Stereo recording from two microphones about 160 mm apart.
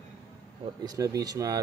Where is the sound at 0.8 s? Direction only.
20° right (ahead or behind).